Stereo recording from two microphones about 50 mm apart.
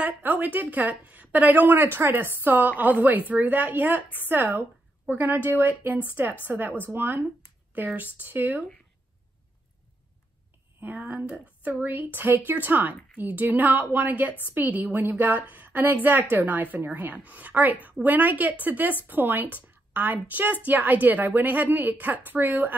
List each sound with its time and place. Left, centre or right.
0.2 s speech: right
5.0 s speech: right
6.2 s a woman's voice: right
6.8 s speech: right
10.8 s speech: right